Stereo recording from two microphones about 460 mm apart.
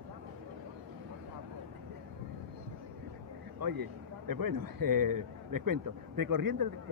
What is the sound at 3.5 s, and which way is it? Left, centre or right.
Speech, right.